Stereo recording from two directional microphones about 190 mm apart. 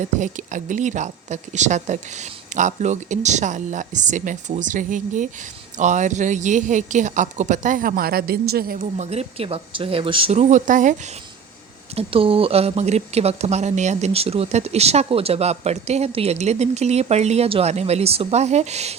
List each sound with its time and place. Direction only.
0.0 s speech: 40° right (ahead or behind)
9.0 s speech: 30° right (ahead or behind)
11.9 s speech: 30° right (ahead or behind)